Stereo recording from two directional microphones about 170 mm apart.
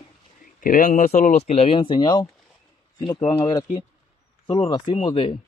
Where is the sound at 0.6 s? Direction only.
50° left (ahead or behind).